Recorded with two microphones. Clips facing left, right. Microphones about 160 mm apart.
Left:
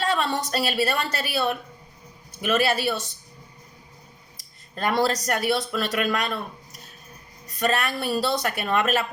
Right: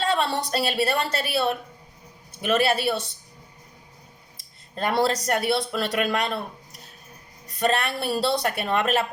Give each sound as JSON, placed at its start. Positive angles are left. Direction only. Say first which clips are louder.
{"t": 0.1, "sound": "speech", "louder": "right 1 dB", "side_deg": -30}
{"t": 4.7, "sound": "speech", "louder": "even", "side_deg": -30}
{"t": 7.6, "sound": "speech", "louder": "right 1 dB", "side_deg": -25}